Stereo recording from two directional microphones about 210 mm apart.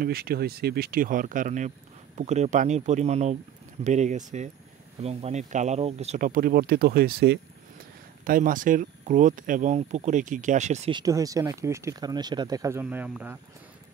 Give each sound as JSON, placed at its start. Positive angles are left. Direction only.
{"t": 0.0, "sound": "speech", "side_deg": -45}